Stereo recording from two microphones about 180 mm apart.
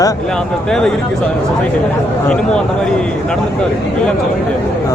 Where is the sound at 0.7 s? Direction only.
5° left (ahead or behind).